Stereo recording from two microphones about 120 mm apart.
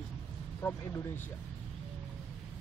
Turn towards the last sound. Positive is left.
turn(degrees=20)  # may be behind; listen again after turning